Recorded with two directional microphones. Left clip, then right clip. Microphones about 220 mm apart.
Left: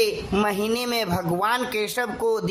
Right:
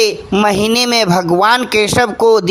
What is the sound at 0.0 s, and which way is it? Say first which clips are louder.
A man's voice: right 9 dB; 40° right (ahead or behind).